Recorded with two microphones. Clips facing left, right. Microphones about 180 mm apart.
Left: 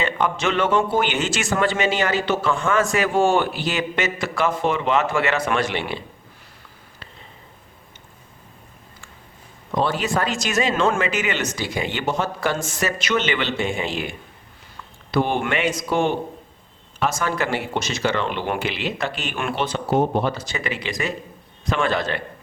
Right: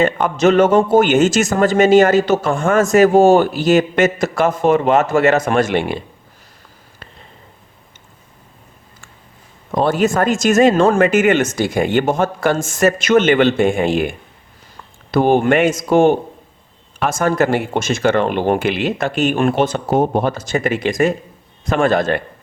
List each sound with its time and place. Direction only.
0.0 s a man's voice: 45° right (ahead or behind)
9.7 s a man's voice: 50° right (ahead or behind)